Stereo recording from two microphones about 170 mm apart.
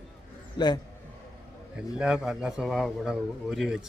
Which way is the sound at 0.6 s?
25° left (ahead or behind).